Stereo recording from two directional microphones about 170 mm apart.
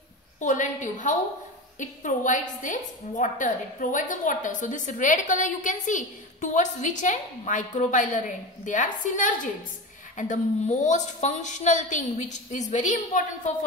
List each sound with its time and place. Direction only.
0.4 s a woman's voice: 50° left (ahead or behind)